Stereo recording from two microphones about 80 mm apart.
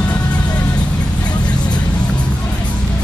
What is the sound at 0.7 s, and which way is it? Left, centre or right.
Vehicle, centre.